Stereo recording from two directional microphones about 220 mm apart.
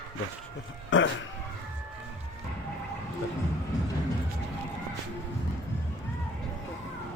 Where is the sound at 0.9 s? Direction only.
60° left (ahead or behind).